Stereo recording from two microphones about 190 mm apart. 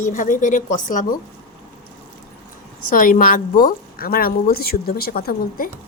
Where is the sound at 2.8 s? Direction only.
45° left (ahead or behind).